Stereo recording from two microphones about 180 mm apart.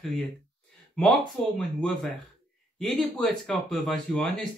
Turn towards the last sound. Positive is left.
turn(degrees=5)  # may be behind; listen again after turning